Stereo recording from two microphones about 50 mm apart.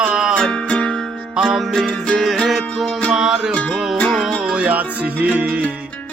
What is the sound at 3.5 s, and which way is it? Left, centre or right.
Music, left.